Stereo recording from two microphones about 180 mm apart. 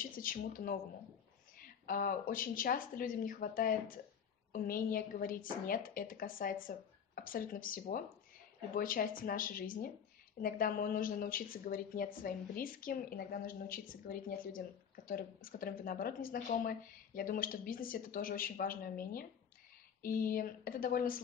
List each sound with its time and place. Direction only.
0.0 s a woman's voice: 50° left (ahead or behind)
1.9 s a woman's voice: 50° left (ahead or behind)